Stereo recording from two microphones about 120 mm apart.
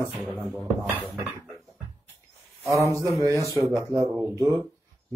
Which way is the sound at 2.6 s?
25° right (ahead or behind).